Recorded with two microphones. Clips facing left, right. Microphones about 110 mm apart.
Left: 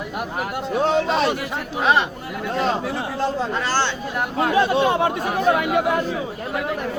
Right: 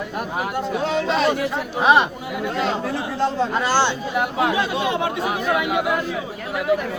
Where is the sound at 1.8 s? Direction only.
15° right (ahead or behind).